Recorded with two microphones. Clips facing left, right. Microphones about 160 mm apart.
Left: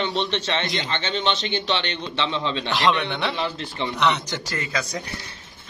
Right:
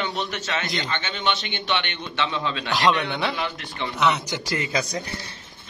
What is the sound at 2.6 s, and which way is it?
Speech, centre (ahead or behind).